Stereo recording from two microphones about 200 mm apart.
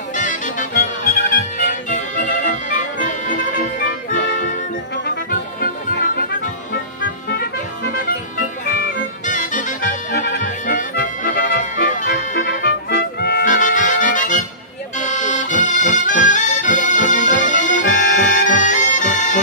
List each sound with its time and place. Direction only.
0.1 s music: 40° left (ahead or behind)
5.6 s music: 45° left (ahead or behind)
9.2 s music: 40° left (ahead or behind)
12.4 s music: 65° left (ahead or behind); by 14.4 s 40° left (ahead or behind)
15.0 s accordion: 40° left (ahead or behind)